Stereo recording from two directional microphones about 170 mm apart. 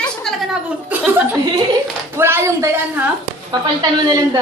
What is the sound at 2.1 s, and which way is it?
Speech, 15° right (ahead or behind).